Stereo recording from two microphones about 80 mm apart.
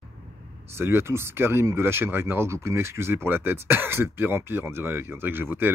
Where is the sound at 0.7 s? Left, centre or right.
Right.